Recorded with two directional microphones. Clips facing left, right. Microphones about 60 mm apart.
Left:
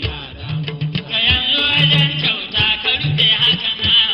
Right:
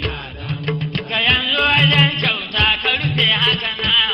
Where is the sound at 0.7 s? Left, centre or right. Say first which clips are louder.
Right 5 dB; right.